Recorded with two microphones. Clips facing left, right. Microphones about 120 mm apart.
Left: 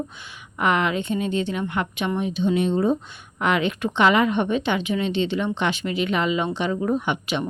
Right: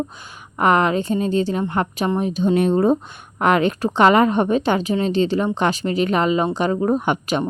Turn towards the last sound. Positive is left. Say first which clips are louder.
# right 4 dB
turn(degrees=-45)  # may be behind; listen again after turning